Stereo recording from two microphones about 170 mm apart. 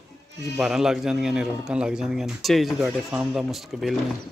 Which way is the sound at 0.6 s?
5° right (ahead or behind).